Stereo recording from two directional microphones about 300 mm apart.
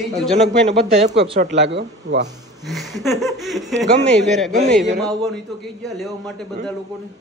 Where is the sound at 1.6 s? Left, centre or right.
Right.